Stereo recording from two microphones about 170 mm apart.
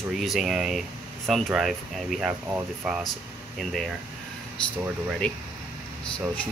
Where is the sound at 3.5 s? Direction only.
Centre (ahead or behind).